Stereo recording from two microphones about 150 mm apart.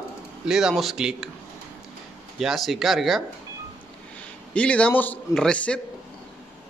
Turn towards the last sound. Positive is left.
turn(degrees=10)  # may be behind; listen again after turning